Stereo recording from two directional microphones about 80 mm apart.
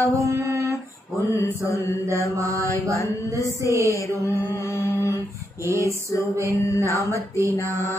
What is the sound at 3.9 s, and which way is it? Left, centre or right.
Mantra, left.